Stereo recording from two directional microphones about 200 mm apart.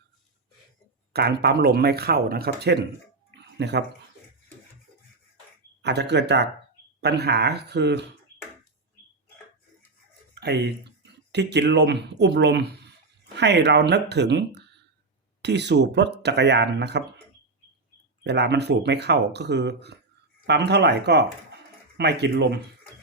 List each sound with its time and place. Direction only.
1.1 s speech: 55° right (ahead or behind)
5.8 s speech: 60° right (ahead or behind)
10.4 s speech: 55° right (ahead or behind)
18.2 s speech: 55° right (ahead or behind)